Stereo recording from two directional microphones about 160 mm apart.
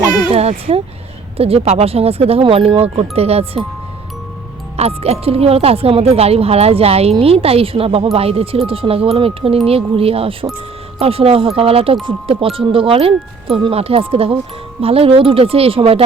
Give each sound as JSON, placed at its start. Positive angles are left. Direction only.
{"t": 0.3, "sound": "a sound", "side_deg": -40}
{"t": 1.4, "sound": "speech", "side_deg": -40}
{"t": 4.8, "sound": "speech", "side_deg": -40}